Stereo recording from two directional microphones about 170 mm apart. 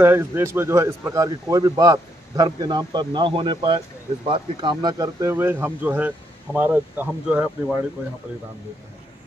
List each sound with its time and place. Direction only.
0.0 s a man's voice: 15° right (ahead or behind)